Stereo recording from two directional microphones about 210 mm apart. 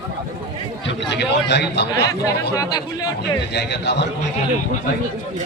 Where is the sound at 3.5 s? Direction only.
55° left (ahead or behind).